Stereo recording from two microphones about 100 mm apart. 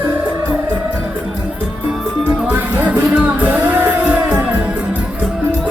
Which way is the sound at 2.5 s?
15° right (ahead or behind).